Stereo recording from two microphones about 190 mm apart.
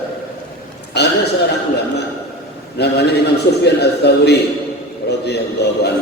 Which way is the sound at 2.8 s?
60° left (ahead or behind).